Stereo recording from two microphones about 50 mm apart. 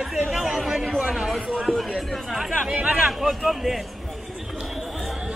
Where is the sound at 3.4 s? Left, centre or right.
Centre.